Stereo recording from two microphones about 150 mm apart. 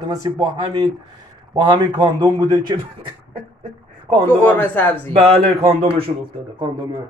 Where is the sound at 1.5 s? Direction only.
30° right (ahead or behind).